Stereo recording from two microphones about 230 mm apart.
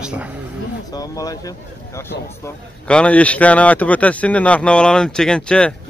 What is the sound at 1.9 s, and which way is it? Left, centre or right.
A man's voice, centre.